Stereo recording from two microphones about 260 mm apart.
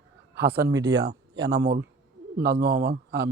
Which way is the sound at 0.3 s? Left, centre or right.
Right.